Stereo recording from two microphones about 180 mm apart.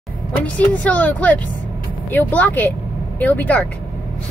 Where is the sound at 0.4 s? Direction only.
10° left (ahead or behind).